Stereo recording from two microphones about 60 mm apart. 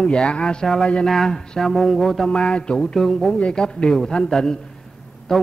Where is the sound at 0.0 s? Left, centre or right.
Centre.